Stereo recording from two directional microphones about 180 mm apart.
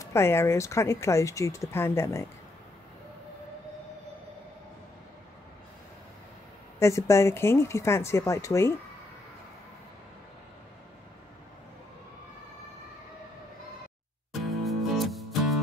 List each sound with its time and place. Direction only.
0.0 s speech: 15° left (ahead or behind)
6.8 s speech: 15° left (ahead or behind)
14.4 s music: centre (ahead or behind)